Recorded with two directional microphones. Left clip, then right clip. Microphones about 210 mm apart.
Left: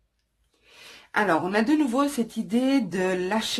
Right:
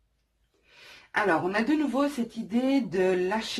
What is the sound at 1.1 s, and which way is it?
Speech, 45° left (ahead or behind).